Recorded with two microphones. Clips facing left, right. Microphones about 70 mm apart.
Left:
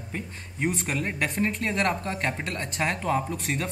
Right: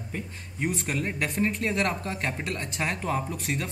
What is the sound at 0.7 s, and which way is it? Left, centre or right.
A man's voice, centre.